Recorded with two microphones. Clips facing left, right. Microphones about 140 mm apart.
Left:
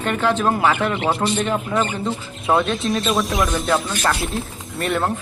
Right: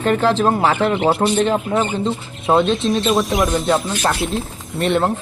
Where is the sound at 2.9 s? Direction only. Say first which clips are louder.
Right 1 dB; centre (ahead or behind).